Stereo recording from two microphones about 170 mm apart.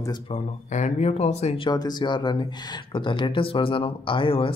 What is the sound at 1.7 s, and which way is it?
Speech, 25° left (ahead or behind).